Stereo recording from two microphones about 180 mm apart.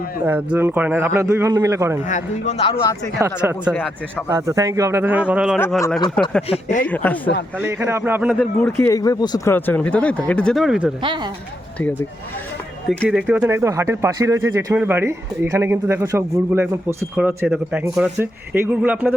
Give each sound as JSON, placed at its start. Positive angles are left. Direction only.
{"t": 0.3, "sound": "a man's voice", "side_deg": -10}
{"t": 2.0, "sound": "a man's voice", "side_deg": 40}
{"t": 3.2, "sound": "a man's voice", "side_deg": -15}
{"t": 6.2, "sound": "speech", "side_deg": 5}
{"t": 6.5, "sound": "a man's voice", "side_deg": 40}
{"t": 6.8, "sound": "speech", "side_deg": 10}
{"t": 7.6, "sound": "a man's voice", "side_deg": -15}
{"t": 8.8, "sound": "speech", "side_deg": 20}
{"t": 11.0, "sound": "speech", "side_deg": -25}
{"t": 13.1, "sound": "a man's voice", "side_deg": -10}